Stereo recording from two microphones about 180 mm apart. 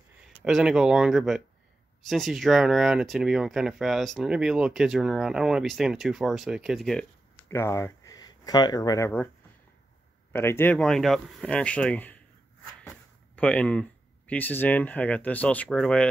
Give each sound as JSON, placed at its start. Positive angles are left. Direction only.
{"t": 0.4, "sound": "speech", "side_deg": -5}
{"t": 7.4, "sound": "speech", "side_deg": 15}
{"t": 10.3, "sound": "speech", "side_deg": 10}
{"t": 13.4, "sound": "speech", "side_deg": 5}